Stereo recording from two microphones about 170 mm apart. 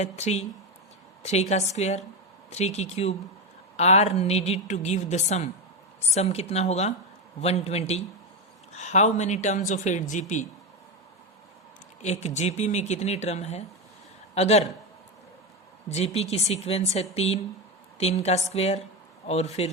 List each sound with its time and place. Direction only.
0.0 s a woman's voice: 40° left (ahead or behind)
12.0 s a woman's voice: 45° left (ahead or behind)
15.9 s a woman's voice: 40° left (ahead or behind)